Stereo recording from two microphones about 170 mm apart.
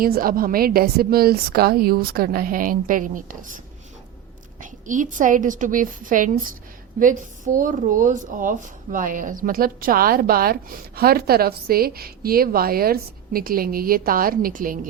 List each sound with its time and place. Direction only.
0.0 s speech: 60° right (ahead or behind)
4.6 s a woman's voice: 50° right (ahead or behind)